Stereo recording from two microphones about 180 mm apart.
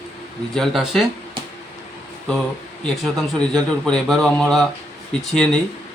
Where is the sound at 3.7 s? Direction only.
5° left (ahead or behind).